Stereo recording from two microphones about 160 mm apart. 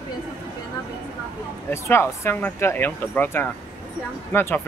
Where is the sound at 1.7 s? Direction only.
15° left (ahead or behind).